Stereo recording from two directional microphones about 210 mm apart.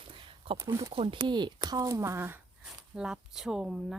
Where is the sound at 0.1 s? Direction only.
25° right (ahead or behind).